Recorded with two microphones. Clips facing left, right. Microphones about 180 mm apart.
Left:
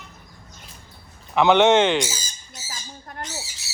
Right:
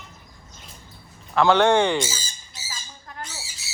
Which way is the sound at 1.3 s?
20° left (ahead or behind).